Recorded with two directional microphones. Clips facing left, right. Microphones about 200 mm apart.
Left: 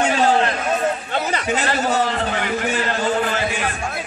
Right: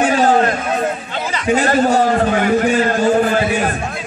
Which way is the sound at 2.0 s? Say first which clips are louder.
Right 7 dB; 45° right (ahead or behind).